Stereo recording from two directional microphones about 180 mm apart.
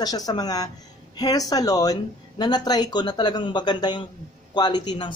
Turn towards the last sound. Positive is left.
turn(degrees=25)  # may be behind; listen again after turning